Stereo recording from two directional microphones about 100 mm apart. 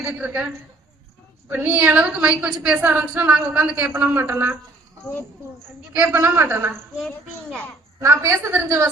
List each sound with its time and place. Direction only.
0.0 s a woman's voice: 15° right (ahead or behind)
1.6 s a woman's voice: 20° right (ahead or behind)
5.9 s a woman's voice: 15° right (ahead or behind)
8.0 s a woman's voice: 30° right (ahead or behind)